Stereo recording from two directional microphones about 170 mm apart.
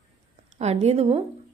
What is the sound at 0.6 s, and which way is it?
Speech, 40° right (ahead or behind).